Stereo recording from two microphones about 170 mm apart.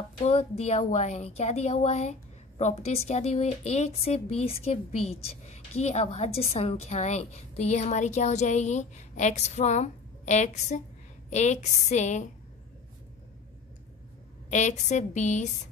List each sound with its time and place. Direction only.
0.2 s a woman's voice: 35° left (ahead or behind)
14.5 s a woman's voice: 45° left (ahead or behind)